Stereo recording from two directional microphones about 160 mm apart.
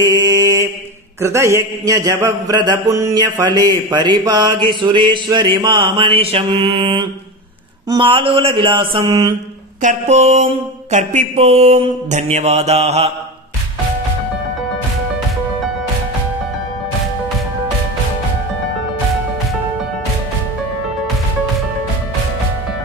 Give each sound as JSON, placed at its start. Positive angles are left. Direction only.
{"t": 0.0, "sound": "mantra", "side_deg": -25}
{"t": 9.8, "sound": "mantra", "side_deg": -50}